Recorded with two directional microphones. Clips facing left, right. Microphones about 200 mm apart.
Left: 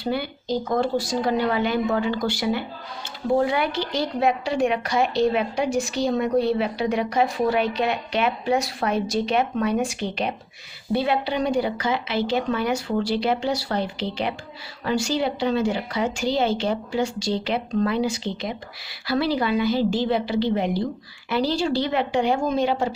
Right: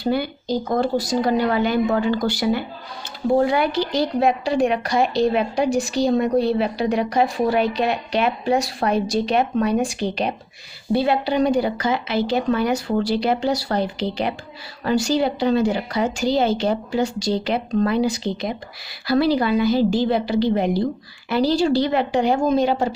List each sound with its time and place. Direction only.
0.0 s speech: 40° right (ahead or behind)